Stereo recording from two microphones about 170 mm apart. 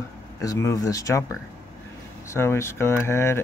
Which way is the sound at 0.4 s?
20° left (ahead or behind).